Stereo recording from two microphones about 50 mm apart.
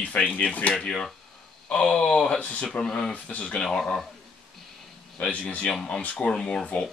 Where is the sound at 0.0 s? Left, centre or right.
Left.